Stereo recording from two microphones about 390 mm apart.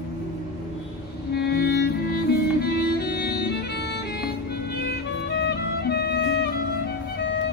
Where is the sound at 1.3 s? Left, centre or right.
Left.